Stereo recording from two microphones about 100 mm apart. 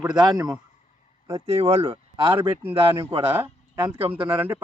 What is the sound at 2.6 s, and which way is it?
Speech, 25° right (ahead or behind).